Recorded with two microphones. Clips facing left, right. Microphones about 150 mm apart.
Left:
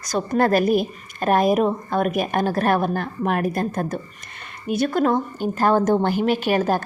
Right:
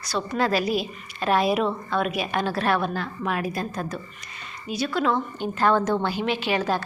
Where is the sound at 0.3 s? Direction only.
50° left (ahead or behind).